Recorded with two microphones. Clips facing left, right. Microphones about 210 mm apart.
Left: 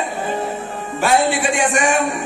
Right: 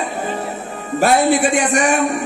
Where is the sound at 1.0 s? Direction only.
40° right (ahead or behind).